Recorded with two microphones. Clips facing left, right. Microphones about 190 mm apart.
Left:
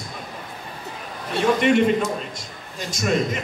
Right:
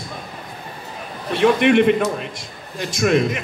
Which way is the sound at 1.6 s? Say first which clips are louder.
Right 3 dB; 60° right (ahead or behind).